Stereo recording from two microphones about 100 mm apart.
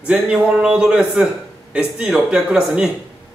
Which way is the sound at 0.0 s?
10° right (ahead or behind).